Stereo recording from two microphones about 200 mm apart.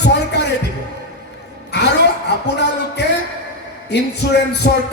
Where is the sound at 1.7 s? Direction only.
60° left (ahead or behind).